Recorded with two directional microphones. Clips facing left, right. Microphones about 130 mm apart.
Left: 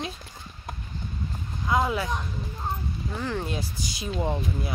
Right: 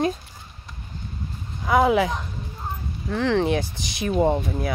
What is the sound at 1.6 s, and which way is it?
Speech, 70° right (ahead or behind).